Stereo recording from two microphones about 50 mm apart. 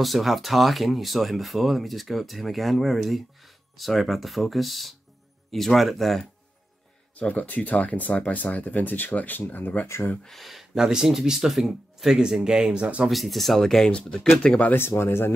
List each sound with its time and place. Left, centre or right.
0.0 s speech: centre
7.2 s speech: left
10.2 s speech: centre; by 13.1 s right
13.1 s speech: centre
13.8 s speech: centre
14.8 s speech: left